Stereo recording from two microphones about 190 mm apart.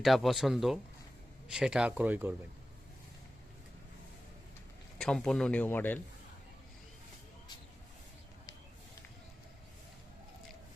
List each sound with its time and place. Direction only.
0.0 s speech: centre (ahead or behind)
4.9 s speech: 5° left (ahead or behind)